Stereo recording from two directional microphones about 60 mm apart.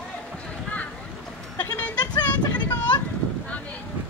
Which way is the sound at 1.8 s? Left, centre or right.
Left.